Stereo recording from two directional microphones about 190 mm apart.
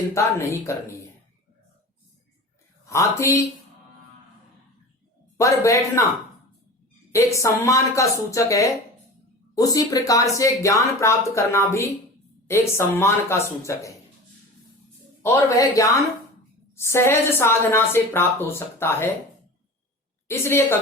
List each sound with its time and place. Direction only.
0.1 s a woman's voice: 15° left (ahead or behind)
2.9 s a woman's voice: 15° left (ahead or behind)
5.4 s a woman's voice: 15° left (ahead or behind)
7.1 s a woman's voice: 15° left (ahead or behind)
15.4 s a woman's voice: 15° left (ahead or behind)
20.2 s a woman's voice: 10° left (ahead or behind)